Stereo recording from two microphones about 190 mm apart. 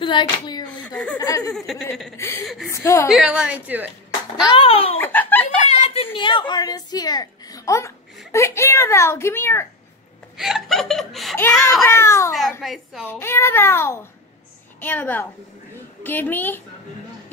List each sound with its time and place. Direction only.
0.0 s speech: 25° left (ahead or behind)
0.7 s a sound: 5° left (ahead or behind)
1.1 s a woman's voice: 20° left (ahead or behind)
1.5 s speech: centre (ahead or behind)
2.1 s a child's voice: 15° left (ahead or behind)
3.1 s a woman's voice: 5° right (ahead or behind)
4.5 s a woman's voice: 30° left (ahead or behind)
4.9 s a child's voice: 10° left (ahead or behind)
5.7 s a sound: 35° left (ahead or behind)
6.1 s a woman's voice: 25° left (ahead or behind)
10.3 s speech: centre (ahead or behind)
11.8 s a child's voice: 15° left (ahead or behind)
12.6 s speech: centre (ahead or behind)
13.1 s a child's voice: 10° left (ahead or behind)